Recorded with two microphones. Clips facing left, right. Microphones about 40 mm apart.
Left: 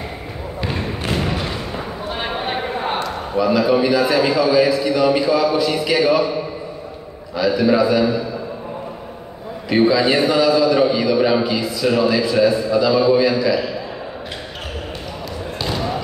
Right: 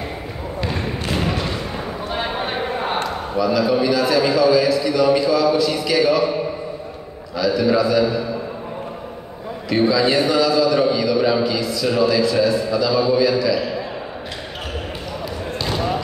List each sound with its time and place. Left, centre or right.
2.3 s a sound: centre
3.3 s a man's voice: left
7.3 s a man's voice: left
9.7 s a man's voice: left